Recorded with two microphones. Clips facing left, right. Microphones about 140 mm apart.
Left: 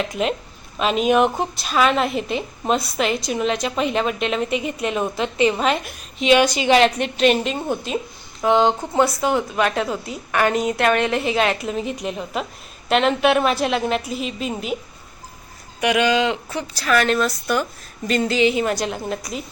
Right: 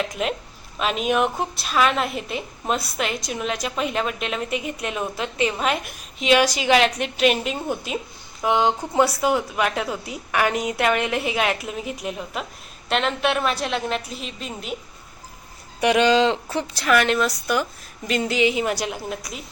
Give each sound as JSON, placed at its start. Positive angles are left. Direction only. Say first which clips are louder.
{"t": 0.0, "sound": "a woman's voice", "louder": "left 3 dB", "side_deg": 0}
{"t": 15.8, "sound": "a woman's voice", "louder": "right 1 dB", "side_deg": -30}